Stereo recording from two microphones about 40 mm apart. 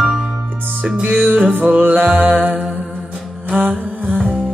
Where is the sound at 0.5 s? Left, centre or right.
Right.